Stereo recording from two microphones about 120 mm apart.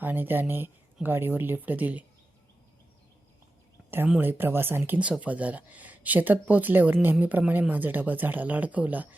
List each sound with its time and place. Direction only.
0.0 s speech: 15° right (ahead or behind)
4.2 s speech: 15° right (ahead or behind)